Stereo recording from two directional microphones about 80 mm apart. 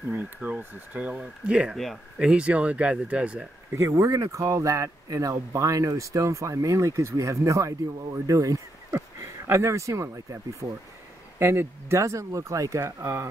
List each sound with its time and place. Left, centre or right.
0.1 s speech: right
3.7 s speech: right